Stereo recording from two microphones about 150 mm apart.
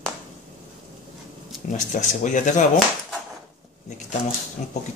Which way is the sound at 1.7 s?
55° left (ahead or behind).